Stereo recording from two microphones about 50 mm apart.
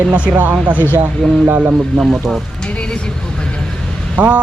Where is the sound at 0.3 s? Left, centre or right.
Right.